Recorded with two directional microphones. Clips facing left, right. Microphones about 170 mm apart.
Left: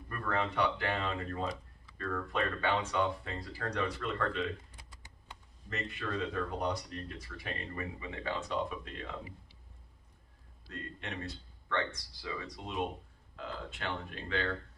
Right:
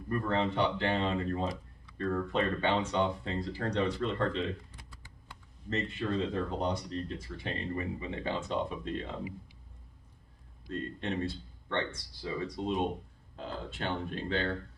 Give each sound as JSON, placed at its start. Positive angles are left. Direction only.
{"t": 0.1, "sound": "speech", "side_deg": -25}
{"t": 4.9, "sound": "typing", "side_deg": 20}
{"t": 5.7, "sound": "speech", "side_deg": -25}
{"t": 10.7, "sound": "speech", "side_deg": -30}